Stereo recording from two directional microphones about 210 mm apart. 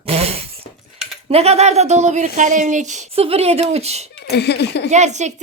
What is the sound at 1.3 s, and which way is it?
Speech, 30° right (ahead or behind).